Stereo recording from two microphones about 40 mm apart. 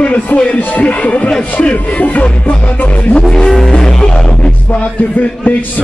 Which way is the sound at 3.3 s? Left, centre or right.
Centre.